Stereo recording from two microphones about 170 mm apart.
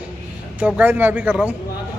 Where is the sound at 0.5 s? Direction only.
10° right (ahead or behind).